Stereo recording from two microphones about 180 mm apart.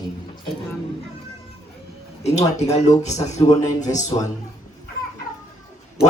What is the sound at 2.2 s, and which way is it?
A man's voice, 40° left (ahead or behind).